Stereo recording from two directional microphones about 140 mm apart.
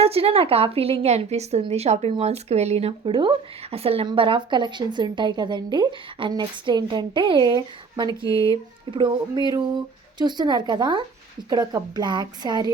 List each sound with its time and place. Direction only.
0.0 s a woman's voice: 45° right (ahead or behind)